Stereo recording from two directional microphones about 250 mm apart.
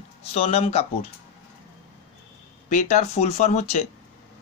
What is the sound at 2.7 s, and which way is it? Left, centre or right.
Speech, left.